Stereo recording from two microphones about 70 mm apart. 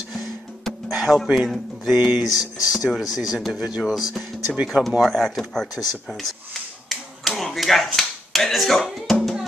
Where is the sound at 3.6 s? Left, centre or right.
Centre.